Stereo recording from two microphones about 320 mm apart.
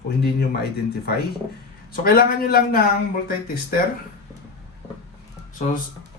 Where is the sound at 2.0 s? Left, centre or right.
Left.